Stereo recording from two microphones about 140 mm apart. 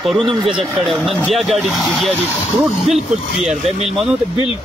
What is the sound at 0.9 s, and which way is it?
Speech, centre (ahead or behind).